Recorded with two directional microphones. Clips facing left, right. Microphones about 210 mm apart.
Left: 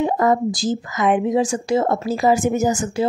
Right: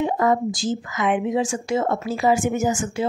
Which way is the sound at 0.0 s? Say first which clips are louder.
Left 2 dB; 40° left (ahead or behind).